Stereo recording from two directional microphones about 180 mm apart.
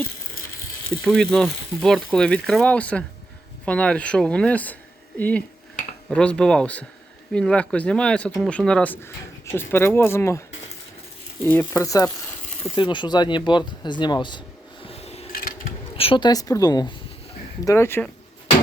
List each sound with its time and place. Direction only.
1.0 s speech: centre (ahead or behind)
11.4 s speech: 10° left (ahead or behind)
14.8 s a sound: 35° left (ahead or behind)
15.3 s a sound: 55° left (ahead or behind)
16.0 s speech: 30° left (ahead or behind)
17.7 s speech: 15° left (ahead or behind)